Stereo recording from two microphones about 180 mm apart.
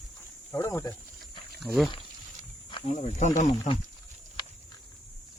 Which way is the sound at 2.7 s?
35° left (ahead or behind).